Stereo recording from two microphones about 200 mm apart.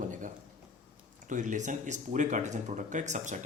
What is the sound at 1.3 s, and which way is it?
Speech, 40° right (ahead or behind).